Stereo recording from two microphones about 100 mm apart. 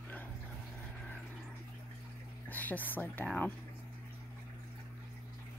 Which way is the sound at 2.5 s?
15° left (ahead or behind).